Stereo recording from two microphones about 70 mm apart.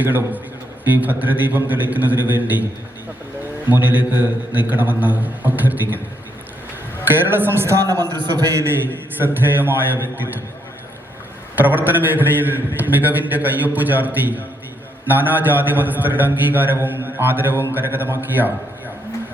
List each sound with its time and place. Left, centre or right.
0.0 s a man's voice: right
3.7 s a man's voice: right
7.1 s speech: right
8.0 s a man's voice: right
8.4 s a man's voice: right
8.7 s a man's voice: right
11.5 s a man's voice: right